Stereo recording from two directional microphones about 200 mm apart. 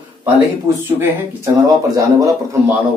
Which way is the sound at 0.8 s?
10° right (ahead or behind).